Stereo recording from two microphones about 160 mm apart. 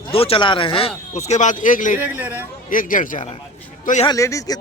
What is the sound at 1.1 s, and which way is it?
Speech, 45° left (ahead or behind).